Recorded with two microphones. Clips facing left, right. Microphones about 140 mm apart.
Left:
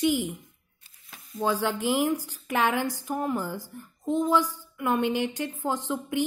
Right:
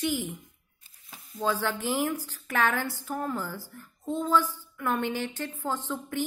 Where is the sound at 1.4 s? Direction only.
15° left (ahead or behind).